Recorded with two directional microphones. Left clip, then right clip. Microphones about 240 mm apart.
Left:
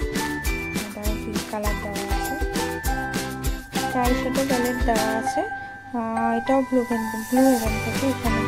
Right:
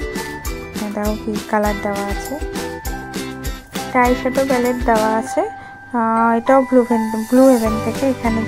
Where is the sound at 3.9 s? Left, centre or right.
Centre.